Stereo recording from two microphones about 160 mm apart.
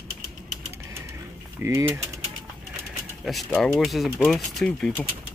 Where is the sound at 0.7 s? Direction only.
15° right (ahead or behind).